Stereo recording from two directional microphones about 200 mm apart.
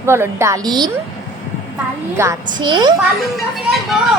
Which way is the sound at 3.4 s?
Centre (ahead or behind).